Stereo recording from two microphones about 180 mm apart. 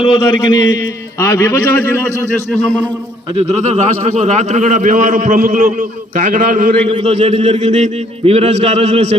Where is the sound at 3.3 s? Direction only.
40° right (ahead or behind).